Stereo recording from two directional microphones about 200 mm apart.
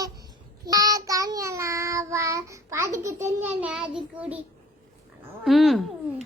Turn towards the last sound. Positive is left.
turn(degrees=0)  # may be behind; listen again after turning